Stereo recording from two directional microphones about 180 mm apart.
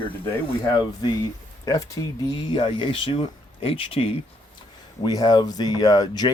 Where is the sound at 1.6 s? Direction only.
20° left (ahead or behind).